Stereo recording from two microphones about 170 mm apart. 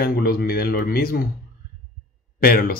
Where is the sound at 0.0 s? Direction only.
65° left (ahead or behind).